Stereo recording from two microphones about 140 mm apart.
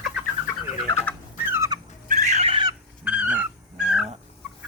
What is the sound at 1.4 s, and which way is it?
Fowl, 15° right (ahead or behind).